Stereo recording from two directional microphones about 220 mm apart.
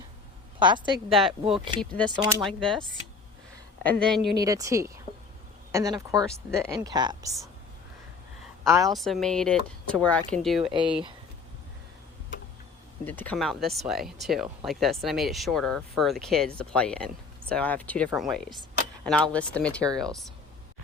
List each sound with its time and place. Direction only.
0.6 s speech: 20° right (ahead or behind)
1.1 s speech: centre (ahead or behind)
3.8 s speech: 5° left (ahead or behind)
4.4 s speech: 15° right (ahead or behind)
8.9 s speech: centre (ahead or behind)
10.6 s speech: 20° right (ahead or behind)
13.1 s speech: 10° left (ahead or behind)